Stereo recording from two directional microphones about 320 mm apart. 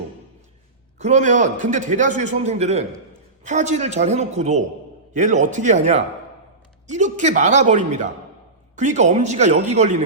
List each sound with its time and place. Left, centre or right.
0.9 s a man's voice: right